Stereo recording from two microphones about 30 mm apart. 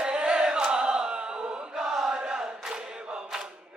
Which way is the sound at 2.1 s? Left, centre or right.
Right.